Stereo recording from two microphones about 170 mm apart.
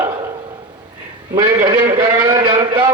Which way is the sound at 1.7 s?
10° right (ahead or behind).